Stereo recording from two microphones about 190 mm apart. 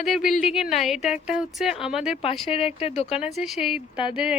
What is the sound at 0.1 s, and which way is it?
Speech, centre (ahead or behind).